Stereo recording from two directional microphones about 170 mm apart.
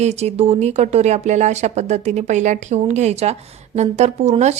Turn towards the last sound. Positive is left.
turn(degrees=-40)  # may be behind; listen again after turning